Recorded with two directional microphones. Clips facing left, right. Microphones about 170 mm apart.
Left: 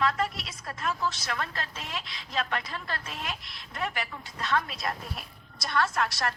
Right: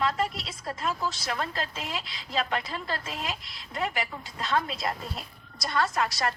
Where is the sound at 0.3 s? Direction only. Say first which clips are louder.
Right 4 dB; 25° right (ahead or behind).